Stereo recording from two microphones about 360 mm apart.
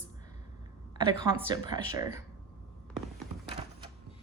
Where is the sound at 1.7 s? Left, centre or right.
Centre.